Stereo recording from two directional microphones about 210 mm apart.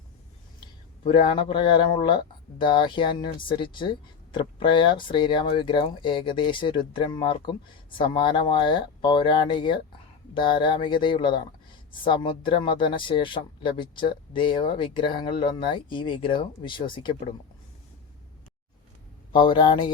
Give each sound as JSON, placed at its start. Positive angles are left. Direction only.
{"t": 1.0, "sound": "speech", "side_deg": 25}
{"t": 19.3, "sound": "speech", "side_deg": 20}